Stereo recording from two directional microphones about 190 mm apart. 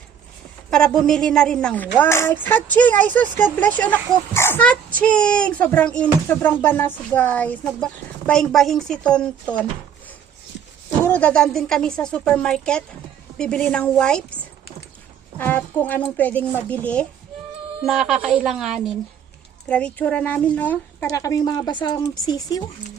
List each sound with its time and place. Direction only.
0.7 s a child's voice: 5° left (ahead or behind)
11.0 s a woman's voice: 10° left (ahead or behind)
15.4 s a child's voice: 10° left (ahead or behind)